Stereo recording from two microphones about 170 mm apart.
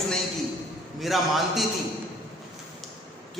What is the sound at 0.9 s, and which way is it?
Speech, centre (ahead or behind).